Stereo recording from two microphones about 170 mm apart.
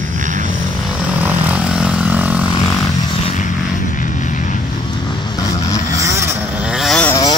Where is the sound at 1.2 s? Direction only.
10° right (ahead or behind).